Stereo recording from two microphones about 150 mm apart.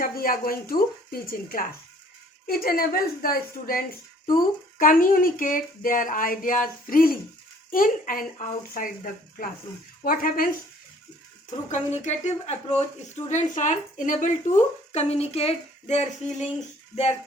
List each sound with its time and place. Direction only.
0.0 s speech: 75° left (ahead or behind)
10.0 s speech: 70° left (ahead or behind)
11.7 s a woman's voice: 50° left (ahead or behind)